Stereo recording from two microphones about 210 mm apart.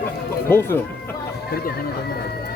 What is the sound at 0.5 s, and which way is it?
Speech, 10° left (ahead or behind).